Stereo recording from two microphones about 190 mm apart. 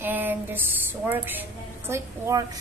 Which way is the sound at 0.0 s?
10° right (ahead or behind).